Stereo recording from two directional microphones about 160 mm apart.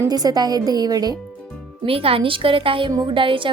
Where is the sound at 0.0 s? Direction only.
25° right (ahead or behind).